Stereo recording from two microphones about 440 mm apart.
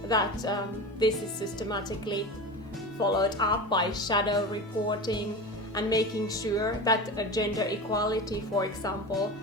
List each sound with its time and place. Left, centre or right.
0.1 s a woman's voice: centre